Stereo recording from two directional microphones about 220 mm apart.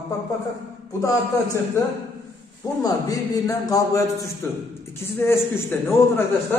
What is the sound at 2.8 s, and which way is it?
A man's voice, 15° left (ahead or behind).